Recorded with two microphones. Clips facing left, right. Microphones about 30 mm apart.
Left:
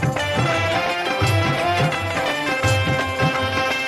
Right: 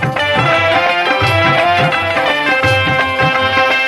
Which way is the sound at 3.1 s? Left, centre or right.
Right.